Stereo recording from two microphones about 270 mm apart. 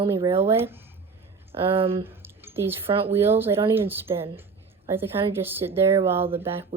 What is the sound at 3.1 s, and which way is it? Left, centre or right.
A woman's voice, centre.